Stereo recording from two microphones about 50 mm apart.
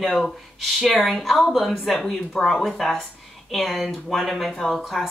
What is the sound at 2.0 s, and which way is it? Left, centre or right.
Speech, centre.